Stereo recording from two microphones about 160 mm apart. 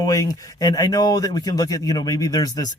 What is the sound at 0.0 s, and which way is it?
Speech, 20° left (ahead or behind).